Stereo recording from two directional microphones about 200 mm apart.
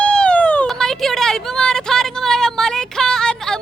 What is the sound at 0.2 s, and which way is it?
Vehicle, 5° left (ahead or behind).